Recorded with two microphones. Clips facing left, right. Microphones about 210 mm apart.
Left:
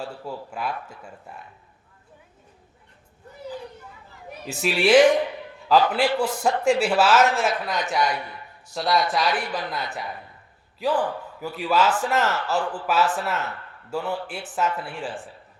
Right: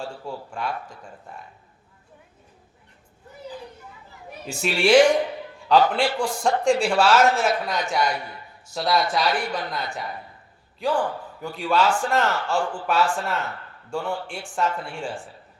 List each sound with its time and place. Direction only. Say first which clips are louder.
0.0 s speech: even; 5° left (ahead or behind)
4.4 s speech: even; centre (ahead or behind)